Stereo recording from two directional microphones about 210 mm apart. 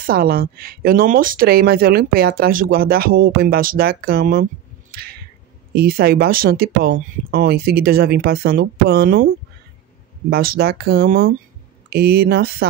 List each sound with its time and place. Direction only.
0.0 s speech: 45° right (ahead or behind)
5.8 s speech: 45° right (ahead or behind)
10.3 s speech: 45° right (ahead or behind)